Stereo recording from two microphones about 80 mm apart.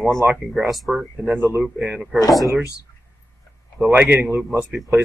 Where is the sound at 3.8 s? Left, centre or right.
Right.